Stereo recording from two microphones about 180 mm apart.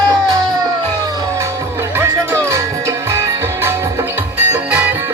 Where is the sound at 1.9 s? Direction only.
15° right (ahead or behind).